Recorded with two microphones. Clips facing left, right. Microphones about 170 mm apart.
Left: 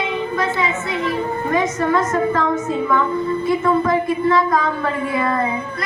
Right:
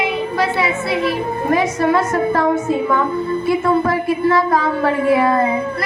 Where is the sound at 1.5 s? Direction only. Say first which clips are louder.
Right 3 dB; 30° right (ahead or behind).